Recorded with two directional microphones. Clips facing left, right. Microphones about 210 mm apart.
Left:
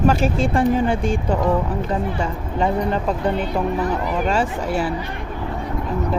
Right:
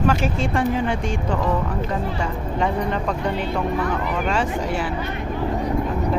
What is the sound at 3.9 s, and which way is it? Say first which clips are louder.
Speech: left 2 dB; 35° left (ahead or behind).